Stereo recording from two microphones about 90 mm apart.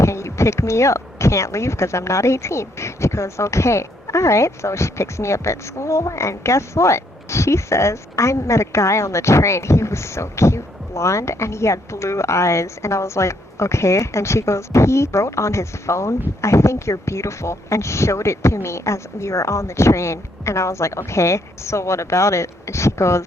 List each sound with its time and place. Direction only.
0.0 s speech: 30° left (ahead or behind)